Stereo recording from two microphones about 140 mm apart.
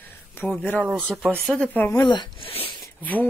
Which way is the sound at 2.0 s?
30° left (ahead or behind).